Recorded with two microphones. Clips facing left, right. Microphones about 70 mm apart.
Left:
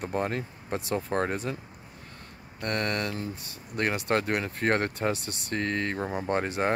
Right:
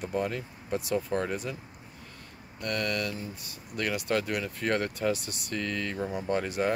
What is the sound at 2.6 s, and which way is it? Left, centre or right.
Speech, left.